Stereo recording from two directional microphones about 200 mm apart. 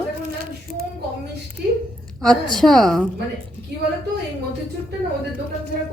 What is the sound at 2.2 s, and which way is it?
Speech, centre (ahead or behind).